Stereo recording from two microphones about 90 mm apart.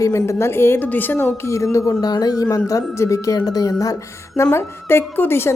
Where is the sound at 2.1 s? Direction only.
45° left (ahead or behind).